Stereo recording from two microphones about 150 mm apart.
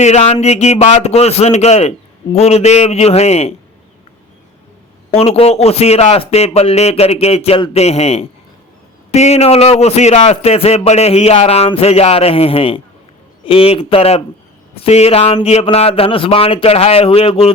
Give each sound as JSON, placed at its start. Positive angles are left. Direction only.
{"t": 0.0, "sound": "a man's voice", "side_deg": 50}
{"t": 5.1, "sound": "a man's voice", "side_deg": 40}